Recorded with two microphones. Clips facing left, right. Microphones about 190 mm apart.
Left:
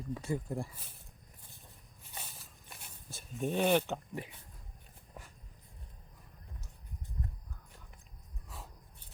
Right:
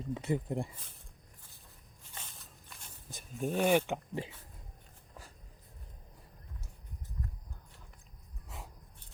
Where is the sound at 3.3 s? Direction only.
Centre (ahead or behind).